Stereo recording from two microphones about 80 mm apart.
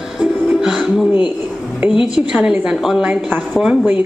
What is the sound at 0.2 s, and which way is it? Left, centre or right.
Music, centre.